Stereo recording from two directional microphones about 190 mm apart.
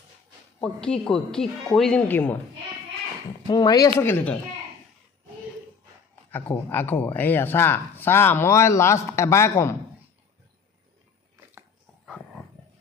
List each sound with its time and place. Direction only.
0.6 s speech: 5° left (ahead or behind)
3.4 s speech: 20° left (ahead or behind)
6.3 s speech: 10° left (ahead or behind)